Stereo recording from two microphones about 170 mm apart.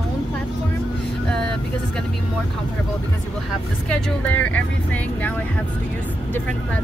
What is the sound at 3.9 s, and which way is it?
Speech, 10° left (ahead or behind).